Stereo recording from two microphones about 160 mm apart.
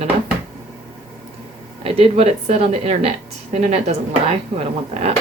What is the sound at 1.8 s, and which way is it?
Speech, 35° right (ahead or behind).